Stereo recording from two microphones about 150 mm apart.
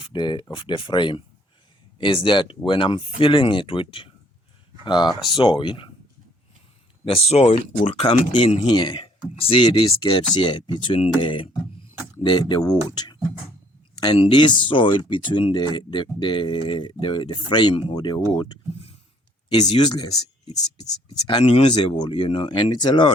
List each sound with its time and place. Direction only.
0.0 s speech: 30° left (ahead or behind)
7.0 s speech: 40° left (ahead or behind)
18.3 s speech: 40° left (ahead or behind)
19.5 s speech: 30° left (ahead or behind)